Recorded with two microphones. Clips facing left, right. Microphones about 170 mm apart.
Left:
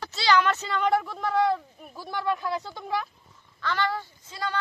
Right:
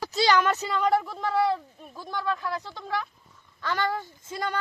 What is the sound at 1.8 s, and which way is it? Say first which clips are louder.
Speech: even; 10° left (ahead or behind).